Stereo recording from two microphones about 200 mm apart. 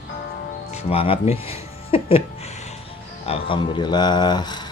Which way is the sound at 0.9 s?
30° left (ahead or behind).